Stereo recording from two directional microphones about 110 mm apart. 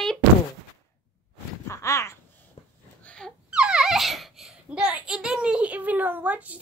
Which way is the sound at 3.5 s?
10° right (ahead or behind).